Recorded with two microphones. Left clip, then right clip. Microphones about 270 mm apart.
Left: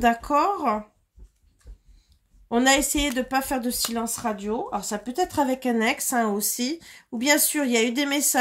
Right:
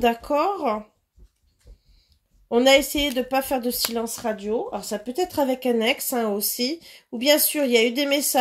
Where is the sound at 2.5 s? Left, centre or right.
Left.